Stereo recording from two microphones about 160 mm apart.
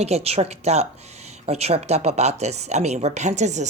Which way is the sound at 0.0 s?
40° right (ahead or behind).